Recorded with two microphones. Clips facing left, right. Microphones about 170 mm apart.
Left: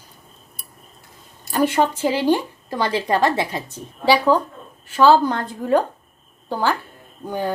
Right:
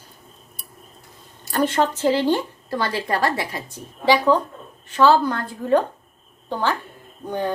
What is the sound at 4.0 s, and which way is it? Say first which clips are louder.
Speech: left 1 dB; 10° left (ahead or behind).